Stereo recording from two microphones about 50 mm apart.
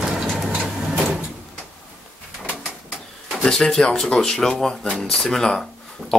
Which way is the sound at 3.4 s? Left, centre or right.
Centre.